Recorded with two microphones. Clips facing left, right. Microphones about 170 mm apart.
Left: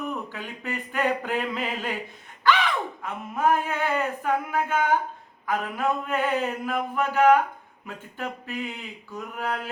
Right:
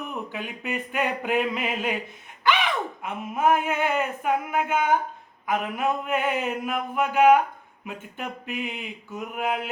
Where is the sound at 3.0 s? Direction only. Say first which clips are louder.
Right 2 dB; 20° right (ahead or behind).